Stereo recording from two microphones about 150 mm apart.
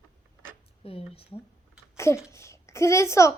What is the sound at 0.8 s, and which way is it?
Speech, 40° left (ahead or behind).